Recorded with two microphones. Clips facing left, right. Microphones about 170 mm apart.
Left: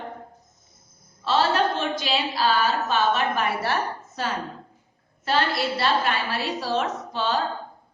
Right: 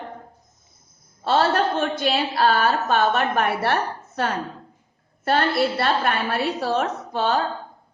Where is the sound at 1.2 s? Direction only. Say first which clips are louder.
Right 2 dB; 55° right (ahead or behind).